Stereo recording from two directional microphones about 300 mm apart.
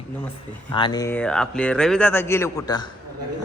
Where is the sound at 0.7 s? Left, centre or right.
Centre.